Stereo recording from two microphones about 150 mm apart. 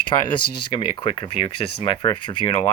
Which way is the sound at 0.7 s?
35° left (ahead or behind).